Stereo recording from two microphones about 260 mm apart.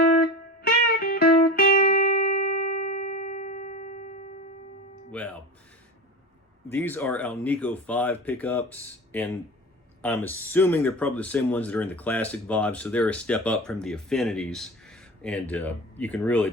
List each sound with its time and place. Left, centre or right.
0.2 s music: left
5.1 s speech: centre
6.7 s speech: centre